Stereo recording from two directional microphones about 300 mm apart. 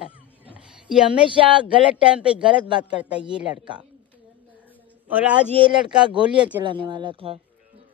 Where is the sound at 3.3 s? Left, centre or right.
Centre.